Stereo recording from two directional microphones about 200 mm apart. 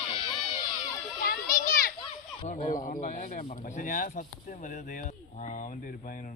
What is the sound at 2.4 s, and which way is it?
Speech, 40° left (ahead or behind).